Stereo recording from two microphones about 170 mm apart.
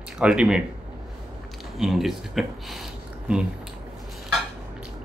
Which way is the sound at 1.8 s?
Centre (ahead or behind).